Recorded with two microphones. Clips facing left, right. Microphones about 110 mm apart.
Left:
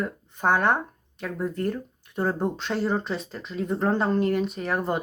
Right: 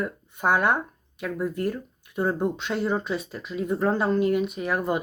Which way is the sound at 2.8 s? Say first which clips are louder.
Even; 5° right (ahead or behind).